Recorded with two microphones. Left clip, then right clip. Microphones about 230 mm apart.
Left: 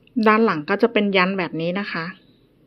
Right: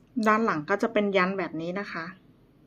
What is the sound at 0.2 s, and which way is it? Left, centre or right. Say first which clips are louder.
A woman's voice: left 7 dB; centre.